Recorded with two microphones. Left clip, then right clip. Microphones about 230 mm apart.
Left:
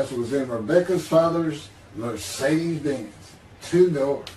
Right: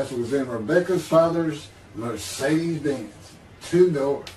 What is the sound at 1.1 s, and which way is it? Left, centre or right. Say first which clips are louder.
A man's voice: right 1 dB; centre.